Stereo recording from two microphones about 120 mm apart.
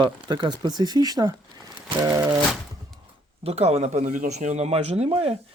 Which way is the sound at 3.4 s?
60° right (ahead or behind).